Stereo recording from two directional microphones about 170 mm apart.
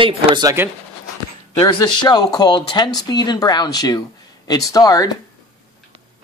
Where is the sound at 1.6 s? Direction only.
25° left (ahead or behind).